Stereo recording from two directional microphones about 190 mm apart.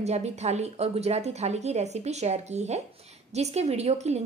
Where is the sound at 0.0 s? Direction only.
35° right (ahead or behind).